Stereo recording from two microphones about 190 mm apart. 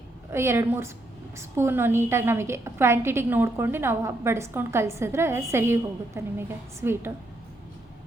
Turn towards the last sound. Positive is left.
turn(degrees=-10)  # may be behind; listen again after turning